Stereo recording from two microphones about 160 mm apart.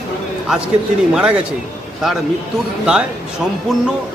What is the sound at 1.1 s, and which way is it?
Speech, 5° right (ahead or behind).